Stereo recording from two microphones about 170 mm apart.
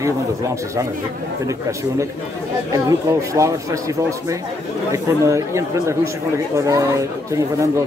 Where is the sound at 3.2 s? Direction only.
20° right (ahead or behind).